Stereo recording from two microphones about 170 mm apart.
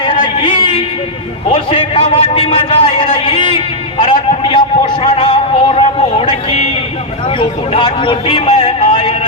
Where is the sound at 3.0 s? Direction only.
30° left (ahead or behind).